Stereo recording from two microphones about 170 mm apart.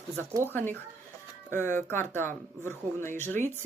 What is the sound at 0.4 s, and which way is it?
Speech, 10° left (ahead or behind).